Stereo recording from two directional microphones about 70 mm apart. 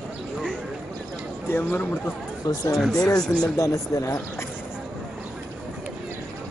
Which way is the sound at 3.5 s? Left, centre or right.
Left.